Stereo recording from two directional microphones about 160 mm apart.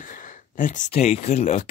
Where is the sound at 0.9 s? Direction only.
40° left (ahead or behind).